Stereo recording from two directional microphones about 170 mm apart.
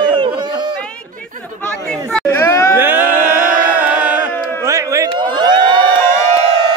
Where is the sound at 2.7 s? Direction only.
10° right (ahead or behind).